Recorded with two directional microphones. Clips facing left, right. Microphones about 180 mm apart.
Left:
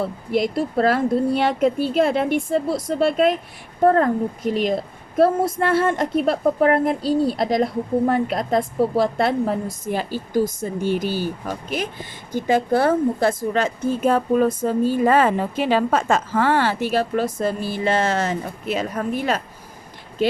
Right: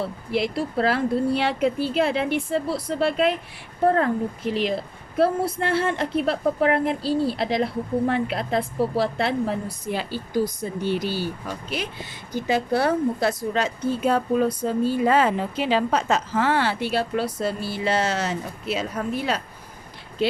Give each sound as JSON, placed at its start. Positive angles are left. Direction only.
{"t": 0.0, "sound": "a woman's voice", "side_deg": 45}